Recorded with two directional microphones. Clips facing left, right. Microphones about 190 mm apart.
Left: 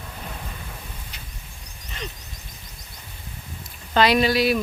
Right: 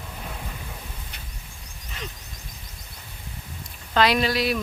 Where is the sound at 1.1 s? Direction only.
55° right (ahead or behind).